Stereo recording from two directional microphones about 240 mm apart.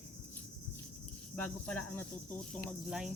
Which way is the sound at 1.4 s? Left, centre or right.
Centre.